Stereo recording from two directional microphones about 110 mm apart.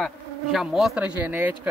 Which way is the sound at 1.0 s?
15° right (ahead or behind).